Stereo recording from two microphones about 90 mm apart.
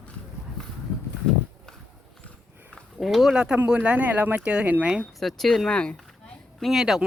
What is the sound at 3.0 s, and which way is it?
Speech, centre (ahead or behind).